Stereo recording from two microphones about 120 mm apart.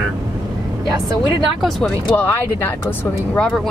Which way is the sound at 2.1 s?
20° left (ahead or behind).